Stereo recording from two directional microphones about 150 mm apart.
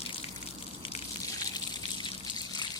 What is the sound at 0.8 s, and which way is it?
Water, 45° left (ahead or behind).